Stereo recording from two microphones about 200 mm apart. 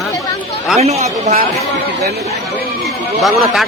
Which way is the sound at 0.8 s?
30° right (ahead or behind).